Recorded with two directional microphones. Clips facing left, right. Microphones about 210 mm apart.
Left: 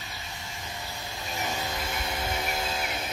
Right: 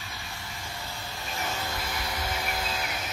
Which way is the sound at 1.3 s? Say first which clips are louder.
Left 1 dB; 15° left (ahead or behind).